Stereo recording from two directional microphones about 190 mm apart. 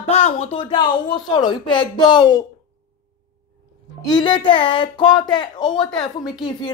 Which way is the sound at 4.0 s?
25° left (ahead or behind).